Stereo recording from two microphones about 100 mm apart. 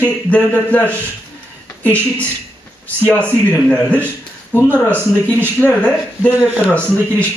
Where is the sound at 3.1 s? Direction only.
15° left (ahead or behind).